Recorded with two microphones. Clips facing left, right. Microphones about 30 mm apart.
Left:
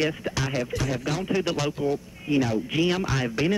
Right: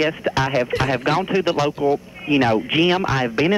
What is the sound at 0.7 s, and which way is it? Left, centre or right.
Speech, right.